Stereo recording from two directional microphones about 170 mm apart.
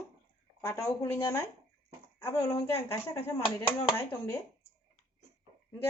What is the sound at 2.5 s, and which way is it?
Speech, 40° left (ahead or behind).